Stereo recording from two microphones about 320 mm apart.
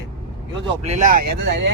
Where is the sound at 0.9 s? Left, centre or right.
Right.